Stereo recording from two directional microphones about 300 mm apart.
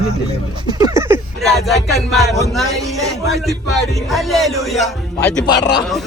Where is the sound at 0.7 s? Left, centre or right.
Centre.